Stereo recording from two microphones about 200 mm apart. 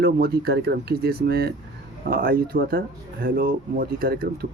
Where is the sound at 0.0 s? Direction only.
50° right (ahead or behind).